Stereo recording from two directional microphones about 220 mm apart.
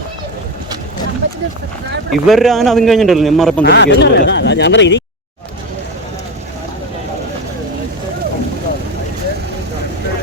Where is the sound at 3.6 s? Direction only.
50° left (ahead or behind).